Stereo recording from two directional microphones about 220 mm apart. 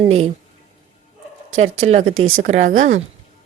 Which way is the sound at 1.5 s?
30° right (ahead or behind).